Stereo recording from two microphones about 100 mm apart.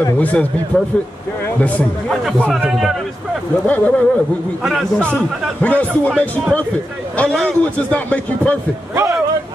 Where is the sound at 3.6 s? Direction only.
15° left (ahead or behind).